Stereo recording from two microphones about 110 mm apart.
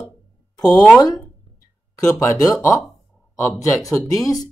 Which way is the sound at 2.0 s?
25° left (ahead or behind).